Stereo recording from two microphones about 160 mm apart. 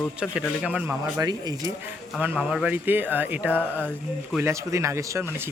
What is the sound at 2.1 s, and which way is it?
Speech, 10° right (ahead or behind).